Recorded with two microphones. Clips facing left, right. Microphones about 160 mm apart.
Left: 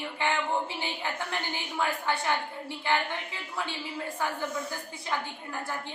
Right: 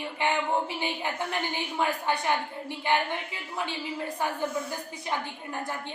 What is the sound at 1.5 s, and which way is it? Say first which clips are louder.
Speech: right 2 dB; 15° right (ahead or behind).